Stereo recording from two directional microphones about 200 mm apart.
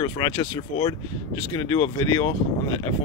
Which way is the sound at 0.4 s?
25° left (ahead or behind).